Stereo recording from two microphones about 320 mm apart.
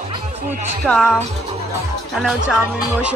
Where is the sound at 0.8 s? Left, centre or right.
Centre.